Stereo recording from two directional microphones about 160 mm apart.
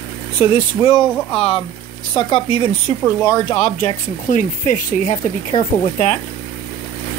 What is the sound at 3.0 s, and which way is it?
Speech, 20° left (ahead or behind).